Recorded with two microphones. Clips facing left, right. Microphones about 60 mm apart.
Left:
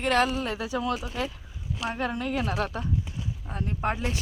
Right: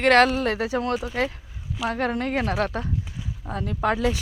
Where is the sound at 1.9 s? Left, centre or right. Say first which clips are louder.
Right 4 dB; right.